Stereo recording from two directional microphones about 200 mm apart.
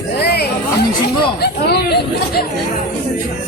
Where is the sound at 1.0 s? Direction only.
55° left (ahead or behind).